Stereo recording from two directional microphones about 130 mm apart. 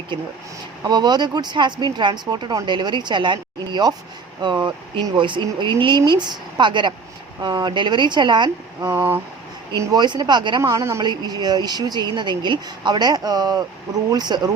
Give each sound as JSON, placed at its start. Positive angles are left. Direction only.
{"t": 0.9, "sound": "speech", "side_deg": -35}
{"t": 8.8, "sound": "speech", "side_deg": -15}
{"t": 9.7, "sound": "speech", "side_deg": -30}
{"t": 10.6, "sound": "a woman's voice", "side_deg": -25}
{"t": 11.0, "sound": "speech", "side_deg": -35}